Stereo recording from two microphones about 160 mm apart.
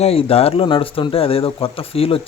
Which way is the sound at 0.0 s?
40° left (ahead or behind).